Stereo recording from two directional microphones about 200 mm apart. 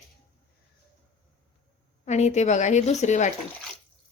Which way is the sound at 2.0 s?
35° left (ahead or behind).